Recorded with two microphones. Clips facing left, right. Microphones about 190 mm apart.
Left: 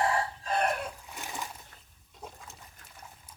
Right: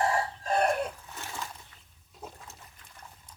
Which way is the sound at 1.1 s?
15° left (ahead or behind).